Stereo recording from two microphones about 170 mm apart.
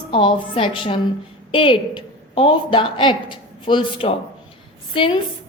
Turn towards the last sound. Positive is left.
turn(degrees=30)  # may be behind; listen again after turning